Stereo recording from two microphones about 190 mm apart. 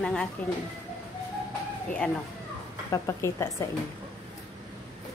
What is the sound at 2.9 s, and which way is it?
Speech, 15° left (ahead or behind).